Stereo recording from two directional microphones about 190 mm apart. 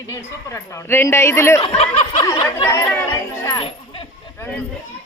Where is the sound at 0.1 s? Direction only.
15° left (ahead or behind).